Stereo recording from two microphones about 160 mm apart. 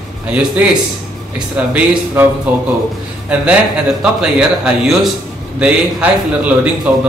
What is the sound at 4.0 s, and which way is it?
A man's voice, 5° right (ahead or behind).